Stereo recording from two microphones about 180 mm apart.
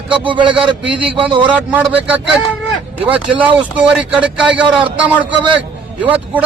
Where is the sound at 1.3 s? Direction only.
25° right (ahead or behind).